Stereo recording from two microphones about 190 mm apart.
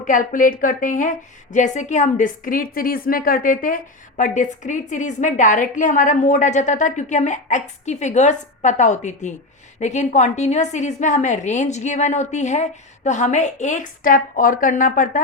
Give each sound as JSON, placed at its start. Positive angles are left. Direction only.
{"t": 0.0, "sound": "a woman's voice", "side_deg": 45}